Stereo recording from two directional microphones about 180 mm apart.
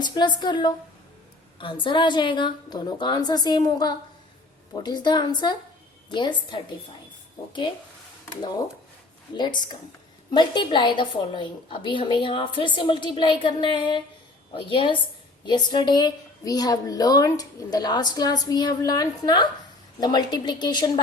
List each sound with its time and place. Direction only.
0.0 s a woman's voice: 25° left (ahead or behind)
9.3 s a woman's voice: 25° left (ahead or behind)